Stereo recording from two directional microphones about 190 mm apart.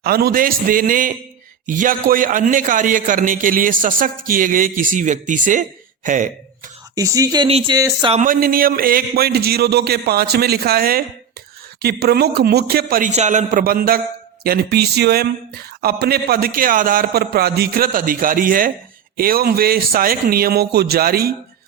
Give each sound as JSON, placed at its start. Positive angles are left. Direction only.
{"t": 0.0, "sound": "a man's voice", "side_deg": -55}
{"t": 6.9, "sound": "speech", "side_deg": -20}
{"t": 7.4, "sound": "speech", "side_deg": -30}
{"t": 8.1, "sound": "a man's voice", "side_deg": -45}